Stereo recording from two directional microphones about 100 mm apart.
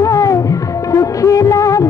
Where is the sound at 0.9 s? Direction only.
35° left (ahead or behind).